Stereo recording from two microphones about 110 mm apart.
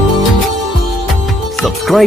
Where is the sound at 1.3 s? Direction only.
Centre (ahead or behind).